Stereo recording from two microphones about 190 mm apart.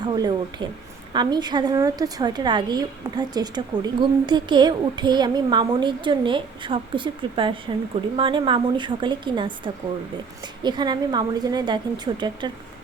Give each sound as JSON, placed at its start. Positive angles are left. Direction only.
{"t": 0.0, "sound": "a woman's voice", "side_deg": -20}
{"t": 10.6, "sound": "a woman's voice", "side_deg": -25}